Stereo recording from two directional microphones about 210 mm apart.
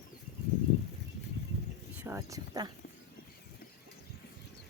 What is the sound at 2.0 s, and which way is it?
Speech, 15° right (ahead or behind).